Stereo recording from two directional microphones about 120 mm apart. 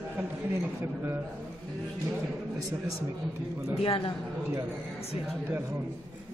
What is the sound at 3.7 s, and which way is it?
Speech, 50° left (ahead or behind).